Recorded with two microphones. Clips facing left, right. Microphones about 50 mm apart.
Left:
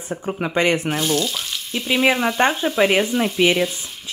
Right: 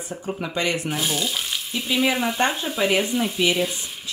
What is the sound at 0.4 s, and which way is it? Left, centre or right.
Speech, left.